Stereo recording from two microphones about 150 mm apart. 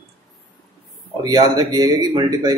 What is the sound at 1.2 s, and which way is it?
Speech, 25° right (ahead or behind).